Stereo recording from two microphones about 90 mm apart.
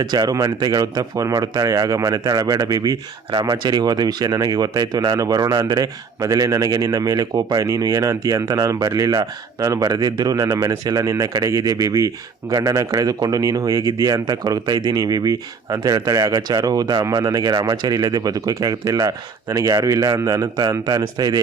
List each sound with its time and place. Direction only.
0.0 s speech: 50° right (ahead or behind)